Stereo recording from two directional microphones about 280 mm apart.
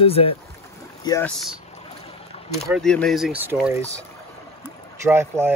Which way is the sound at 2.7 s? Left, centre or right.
Centre.